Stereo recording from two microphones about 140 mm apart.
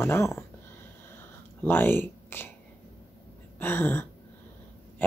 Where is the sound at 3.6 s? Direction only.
15° left (ahead or behind).